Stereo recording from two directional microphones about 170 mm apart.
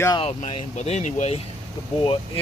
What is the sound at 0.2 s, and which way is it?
Speech, 40° left (ahead or behind).